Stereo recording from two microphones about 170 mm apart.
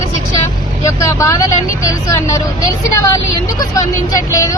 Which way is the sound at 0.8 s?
20° left (ahead or behind).